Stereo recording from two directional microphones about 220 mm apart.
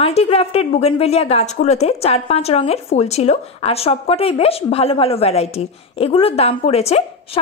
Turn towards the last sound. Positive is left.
turn(degrees=30)  # may be behind; listen again after turning